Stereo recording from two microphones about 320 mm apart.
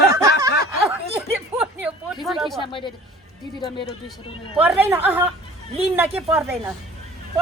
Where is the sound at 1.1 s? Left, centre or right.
Centre.